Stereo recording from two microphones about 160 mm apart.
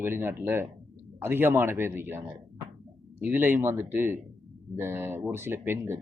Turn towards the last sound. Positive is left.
turn(degrees=-15)  # may be behind; listen again after turning